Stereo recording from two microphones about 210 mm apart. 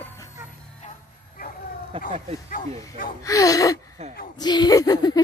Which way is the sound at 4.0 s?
30° right (ahead or behind).